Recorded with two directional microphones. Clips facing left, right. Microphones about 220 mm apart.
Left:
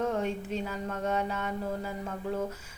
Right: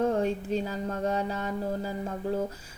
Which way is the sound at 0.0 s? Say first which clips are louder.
Right 4 dB; 35° right (ahead or behind).